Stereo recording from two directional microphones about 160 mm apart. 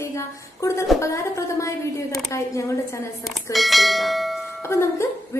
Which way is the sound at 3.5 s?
Centre (ahead or behind).